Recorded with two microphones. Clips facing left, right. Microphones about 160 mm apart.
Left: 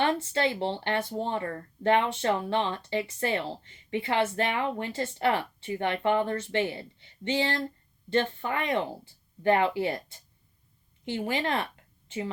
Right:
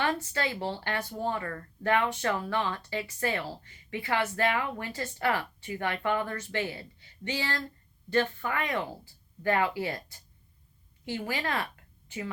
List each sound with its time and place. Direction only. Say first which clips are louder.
0.0 s a woman's voice: left 4 dB; 25° left (ahead or behind)